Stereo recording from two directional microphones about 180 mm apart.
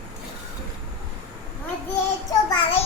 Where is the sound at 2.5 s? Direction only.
30° left (ahead or behind).